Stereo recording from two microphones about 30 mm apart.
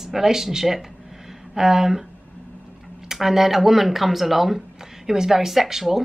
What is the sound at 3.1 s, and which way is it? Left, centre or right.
A woman's voice, centre.